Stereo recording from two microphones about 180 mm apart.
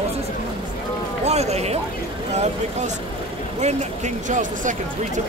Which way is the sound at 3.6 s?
40° right (ahead or behind).